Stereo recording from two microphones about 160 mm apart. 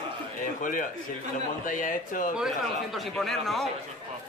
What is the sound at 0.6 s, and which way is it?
Speech, 55° left (ahead or behind).